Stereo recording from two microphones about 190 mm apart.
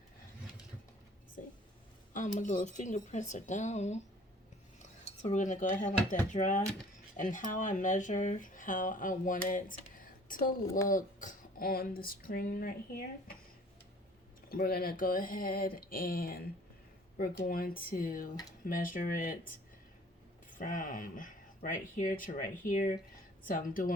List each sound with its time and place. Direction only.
2.4 s speech: 40° left (ahead or behind)
5.0 s a woman's voice: 35° left (ahead or behind)
14.5 s speech: 50° left (ahead or behind)